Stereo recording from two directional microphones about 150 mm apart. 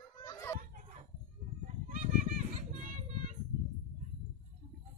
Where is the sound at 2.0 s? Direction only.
55° right (ahead or behind).